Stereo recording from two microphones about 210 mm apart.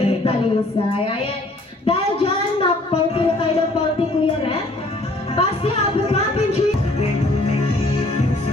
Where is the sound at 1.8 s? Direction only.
25° left (ahead or behind).